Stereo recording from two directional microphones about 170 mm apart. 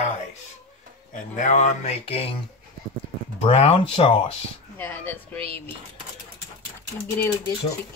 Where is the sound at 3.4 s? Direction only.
35° left (ahead or behind).